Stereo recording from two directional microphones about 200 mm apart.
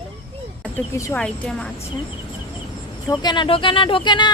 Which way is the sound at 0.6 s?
10° left (ahead or behind).